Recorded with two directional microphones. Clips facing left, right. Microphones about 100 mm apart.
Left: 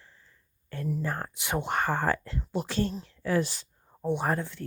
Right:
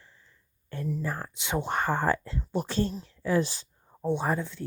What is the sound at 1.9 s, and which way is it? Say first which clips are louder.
Speech: right 1 dB; 20° right (ahead or behind).